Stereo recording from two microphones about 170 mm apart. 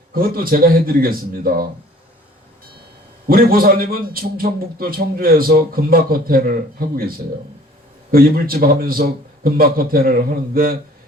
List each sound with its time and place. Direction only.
0.1 s a man's voice: 60° right (ahead or behind)
3.2 s a man's voice: 60° right (ahead or behind)
8.1 s a man's voice: 60° right (ahead or behind)